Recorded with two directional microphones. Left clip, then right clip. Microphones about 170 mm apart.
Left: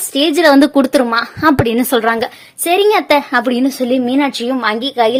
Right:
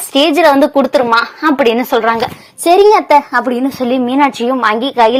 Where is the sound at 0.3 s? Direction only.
30° left (ahead or behind).